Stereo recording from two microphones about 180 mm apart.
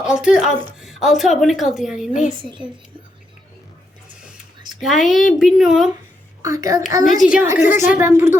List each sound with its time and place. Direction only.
0.0 s a woman's voice: 5° right (ahead or behind)
2.4 s a woman's voice: 25° right (ahead or behind)
4.8 s a woman's voice: centre (ahead or behind)
6.4 s a child's voice: 20° right (ahead or behind)
7.2 s a woman's voice: 5° right (ahead or behind)